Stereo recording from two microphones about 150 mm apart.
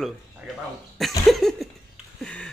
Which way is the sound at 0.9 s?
Centre (ahead or behind).